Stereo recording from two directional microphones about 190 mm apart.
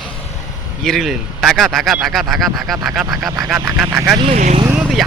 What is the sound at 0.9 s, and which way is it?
Speech, centre (ahead or behind).